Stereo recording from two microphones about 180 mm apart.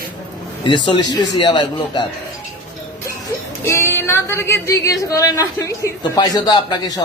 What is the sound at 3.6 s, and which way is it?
Speech, 15° left (ahead or behind).